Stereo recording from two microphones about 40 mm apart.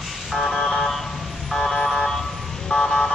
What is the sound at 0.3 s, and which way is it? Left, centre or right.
Vehicle, centre.